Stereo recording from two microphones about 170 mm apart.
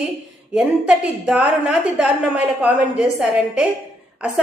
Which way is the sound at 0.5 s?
5° right (ahead or behind).